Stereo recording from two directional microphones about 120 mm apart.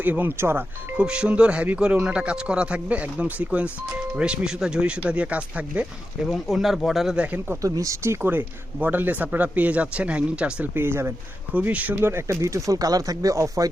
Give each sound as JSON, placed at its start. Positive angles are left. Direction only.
{"t": 0.0, "sound": "speech", "side_deg": -15}
{"t": 0.9, "sound": "speech", "side_deg": -10}
{"t": 6.2, "sound": "speech", "side_deg": 0}